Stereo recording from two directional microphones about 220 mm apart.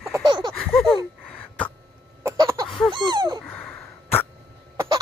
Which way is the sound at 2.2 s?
15° right (ahead or behind).